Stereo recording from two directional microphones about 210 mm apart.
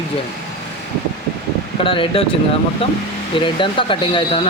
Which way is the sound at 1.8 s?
25° left (ahead or behind).